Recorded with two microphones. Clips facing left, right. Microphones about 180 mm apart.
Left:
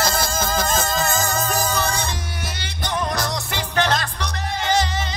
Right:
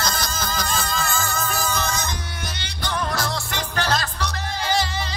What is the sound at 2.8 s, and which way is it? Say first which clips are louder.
Music: left 2 dB; 20° left (ahead or behind).